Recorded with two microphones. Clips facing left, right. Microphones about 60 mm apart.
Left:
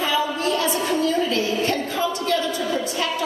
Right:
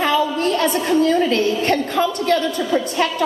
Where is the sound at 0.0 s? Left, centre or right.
Right.